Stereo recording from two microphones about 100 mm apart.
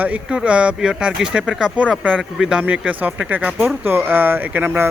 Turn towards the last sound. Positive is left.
turn(degrees=-20)  # may be behind; listen again after turning